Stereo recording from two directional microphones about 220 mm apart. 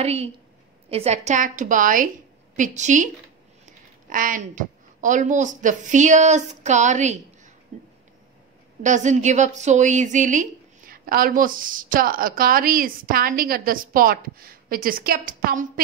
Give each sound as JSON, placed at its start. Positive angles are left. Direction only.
{"t": 0.0, "sound": "a woman's voice", "side_deg": -30}
{"t": 8.8, "sound": "a woman's voice", "side_deg": -35}